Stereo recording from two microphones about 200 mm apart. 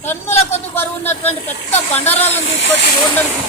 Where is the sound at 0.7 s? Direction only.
10° left (ahead or behind).